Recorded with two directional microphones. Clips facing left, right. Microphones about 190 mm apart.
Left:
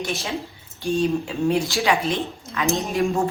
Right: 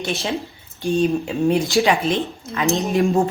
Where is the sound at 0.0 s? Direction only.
30° right (ahead or behind).